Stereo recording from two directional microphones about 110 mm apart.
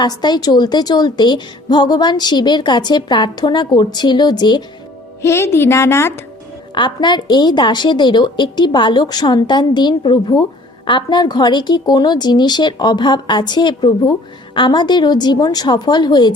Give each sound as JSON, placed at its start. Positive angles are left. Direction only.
{"t": 0.0, "sound": "a woman's voice", "side_deg": 40}
{"t": 5.2, "sound": "a woman's voice", "side_deg": 25}
{"t": 6.7, "sound": "a woman's voice", "side_deg": 45}